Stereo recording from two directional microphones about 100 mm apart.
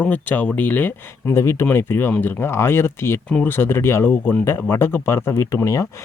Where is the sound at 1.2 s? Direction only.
30° left (ahead or behind).